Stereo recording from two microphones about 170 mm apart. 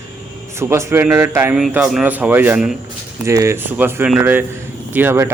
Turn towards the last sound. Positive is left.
turn(degrees=-15)  # may be behind; listen again after turning